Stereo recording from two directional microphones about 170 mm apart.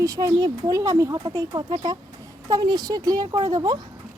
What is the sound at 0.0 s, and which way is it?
Speech, 20° right (ahead or behind).